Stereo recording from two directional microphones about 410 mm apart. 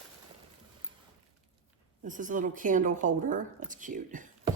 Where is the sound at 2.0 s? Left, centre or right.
Centre.